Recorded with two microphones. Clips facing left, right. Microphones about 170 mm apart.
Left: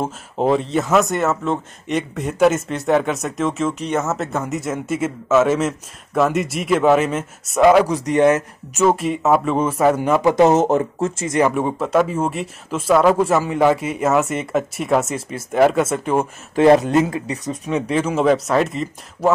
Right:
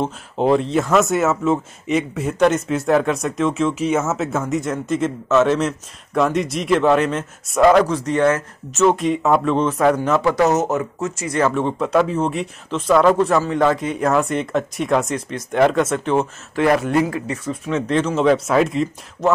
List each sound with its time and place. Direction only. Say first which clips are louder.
0.0 s speech: right 1 dB; centre (ahead or behind); by 8.8 s 20° left (ahead or behind)
8.8 s a man's voice: even; 5° left (ahead or behind)
10.3 s speech: left 3 dB; 25° left (ahead or behind)
11.3 s a man's voice: even; 15° left (ahead or behind)
16.5 s speech: left 4 dB; 25° left (ahead or behind); by 19.3 s centre (ahead or behind)